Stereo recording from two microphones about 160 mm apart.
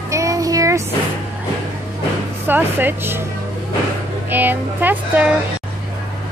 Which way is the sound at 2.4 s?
10° right (ahead or behind).